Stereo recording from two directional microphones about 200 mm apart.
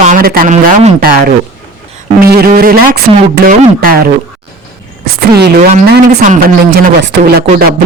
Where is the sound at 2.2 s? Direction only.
50° right (ahead or behind).